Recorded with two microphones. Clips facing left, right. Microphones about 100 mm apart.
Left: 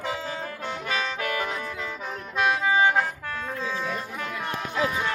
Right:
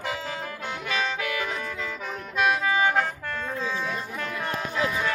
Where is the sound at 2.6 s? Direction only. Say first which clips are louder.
Left 2 dB; 20° left (ahead or behind).